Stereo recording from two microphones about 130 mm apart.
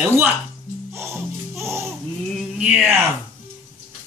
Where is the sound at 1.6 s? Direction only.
20° right (ahead or behind).